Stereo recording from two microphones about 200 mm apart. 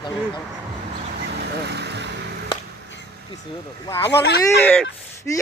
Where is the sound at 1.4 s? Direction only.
55° right (ahead or behind).